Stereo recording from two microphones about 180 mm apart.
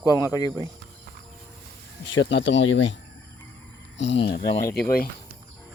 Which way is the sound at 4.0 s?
80° left.